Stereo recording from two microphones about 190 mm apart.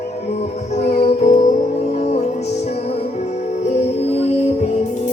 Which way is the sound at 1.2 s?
40° left (ahead or behind).